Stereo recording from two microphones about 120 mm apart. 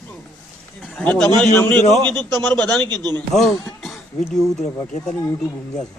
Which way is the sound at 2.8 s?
35° right (ahead or behind).